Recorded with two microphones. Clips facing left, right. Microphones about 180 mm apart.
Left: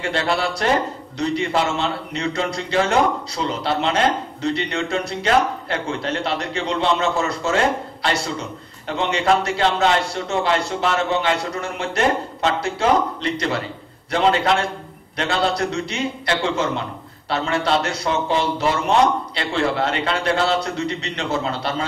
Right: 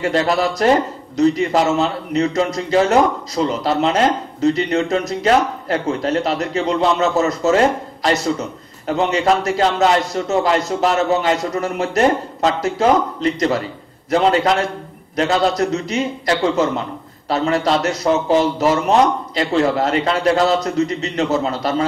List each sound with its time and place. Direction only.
0.0 s a man's voice: 40° right (ahead or behind)